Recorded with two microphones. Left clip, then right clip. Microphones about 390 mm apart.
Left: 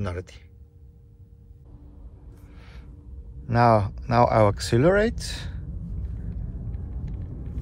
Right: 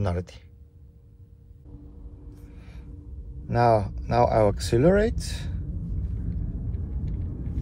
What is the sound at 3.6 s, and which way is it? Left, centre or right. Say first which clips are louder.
Speech: left 2 dB; left.